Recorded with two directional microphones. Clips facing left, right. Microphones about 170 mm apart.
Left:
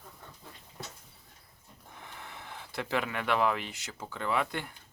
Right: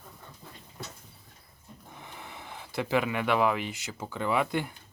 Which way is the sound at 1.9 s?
10° right (ahead or behind).